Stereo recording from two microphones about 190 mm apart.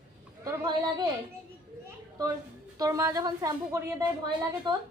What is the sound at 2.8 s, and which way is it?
A woman's voice, 15° right (ahead or behind).